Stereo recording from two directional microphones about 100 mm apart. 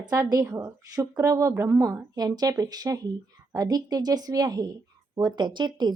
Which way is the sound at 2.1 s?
40° right (ahead or behind).